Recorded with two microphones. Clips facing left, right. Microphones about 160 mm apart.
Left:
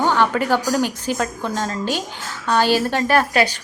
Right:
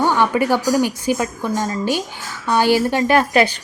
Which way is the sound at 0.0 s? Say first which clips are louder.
Right 2 dB; 15° right (ahead or behind).